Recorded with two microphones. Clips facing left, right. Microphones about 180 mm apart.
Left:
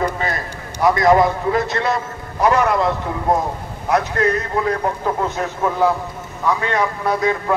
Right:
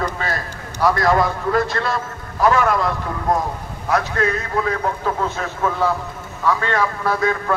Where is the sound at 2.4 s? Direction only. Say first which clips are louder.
Left 1 dB; 20° left (ahead or behind).